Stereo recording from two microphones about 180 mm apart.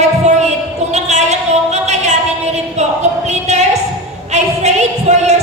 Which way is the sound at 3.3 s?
40° right (ahead or behind).